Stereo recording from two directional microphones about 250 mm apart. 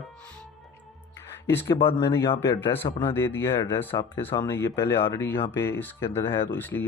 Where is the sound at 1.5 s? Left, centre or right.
Centre.